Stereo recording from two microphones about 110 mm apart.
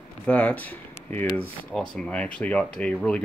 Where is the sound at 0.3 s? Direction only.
10° left (ahead or behind).